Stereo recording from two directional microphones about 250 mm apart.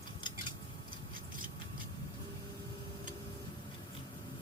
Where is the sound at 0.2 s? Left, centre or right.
Centre.